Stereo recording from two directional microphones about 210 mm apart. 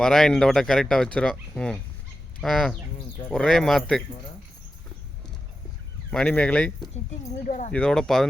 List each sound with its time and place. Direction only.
0.0 s speech: centre (ahead or behind)
6.1 s speech: 5° left (ahead or behind)
7.4 s speech: 35° left (ahead or behind)
7.7 s speech: 5° left (ahead or behind)